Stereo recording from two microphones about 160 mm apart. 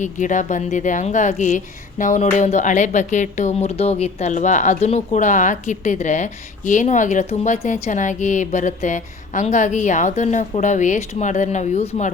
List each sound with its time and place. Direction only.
0.0 s speech: 50° left (ahead or behind)